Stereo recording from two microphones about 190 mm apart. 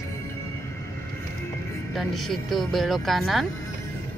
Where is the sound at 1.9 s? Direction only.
Centre (ahead or behind).